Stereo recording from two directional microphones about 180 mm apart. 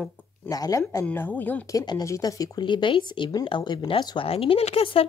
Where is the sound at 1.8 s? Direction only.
20° left (ahead or behind).